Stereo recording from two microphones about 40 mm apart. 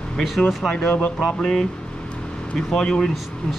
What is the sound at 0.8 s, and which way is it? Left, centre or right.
Speech, left.